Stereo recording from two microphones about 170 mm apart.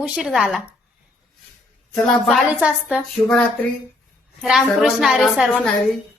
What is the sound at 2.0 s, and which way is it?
A woman's voice, centre (ahead or behind).